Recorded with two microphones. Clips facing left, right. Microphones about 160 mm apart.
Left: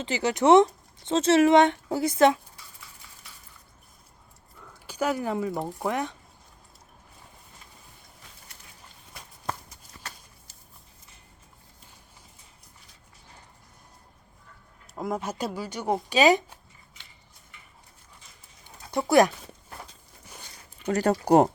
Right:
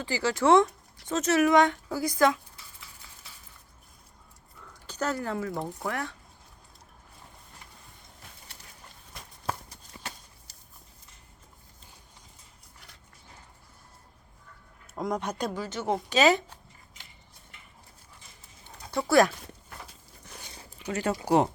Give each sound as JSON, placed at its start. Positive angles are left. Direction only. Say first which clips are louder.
{"t": 0.0, "sound": "a woman's voice", "louder": "left 2 dB", "side_deg": 20}
{"t": 4.7, "sound": "speech", "louder": "left 3 dB", "side_deg": 10}
{"t": 14.9, "sound": "speech", "louder": "even", "side_deg": 5}
{"t": 18.6, "sound": "a sound", "louder": "left 2 dB", "side_deg": 15}
{"t": 20.9, "sound": "speech", "louder": "left 5 dB", "side_deg": 40}